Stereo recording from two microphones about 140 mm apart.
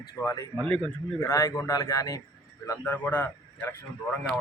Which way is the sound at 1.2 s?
20° left (ahead or behind).